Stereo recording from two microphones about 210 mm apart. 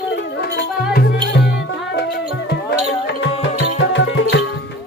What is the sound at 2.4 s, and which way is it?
Music, 60° left (ahead or behind).